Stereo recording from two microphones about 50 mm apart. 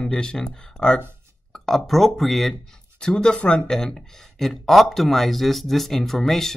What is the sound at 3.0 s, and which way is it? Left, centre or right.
Speech, centre.